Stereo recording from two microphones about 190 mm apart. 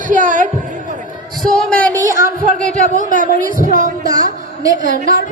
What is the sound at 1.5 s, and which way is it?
Speech, centre (ahead or behind).